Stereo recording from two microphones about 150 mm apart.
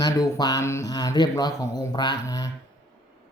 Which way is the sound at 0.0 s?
25° left (ahead or behind).